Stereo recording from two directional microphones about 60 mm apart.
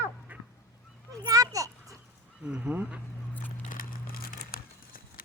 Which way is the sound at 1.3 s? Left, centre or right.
Right.